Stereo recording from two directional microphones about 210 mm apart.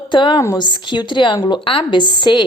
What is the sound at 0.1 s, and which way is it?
Speech, 20° left (ahead or behind).